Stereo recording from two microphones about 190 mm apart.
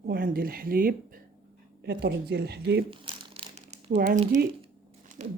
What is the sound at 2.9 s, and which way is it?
Crumpling, 25° right (ahead or behind).